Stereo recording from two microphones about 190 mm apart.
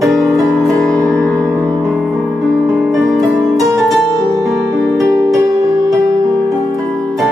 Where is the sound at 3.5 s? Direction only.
20° right (ahead or behind).